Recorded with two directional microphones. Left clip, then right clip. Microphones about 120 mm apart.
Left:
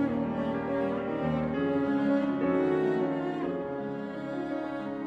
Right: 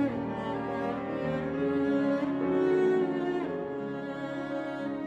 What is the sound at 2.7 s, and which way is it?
Music, 30° right (ahead or behind).